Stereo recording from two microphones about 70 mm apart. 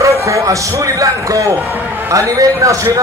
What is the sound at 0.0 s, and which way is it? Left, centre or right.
A man's voice, right.